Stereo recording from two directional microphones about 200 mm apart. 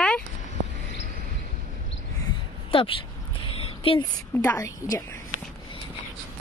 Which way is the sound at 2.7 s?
25° left (ahead or behind).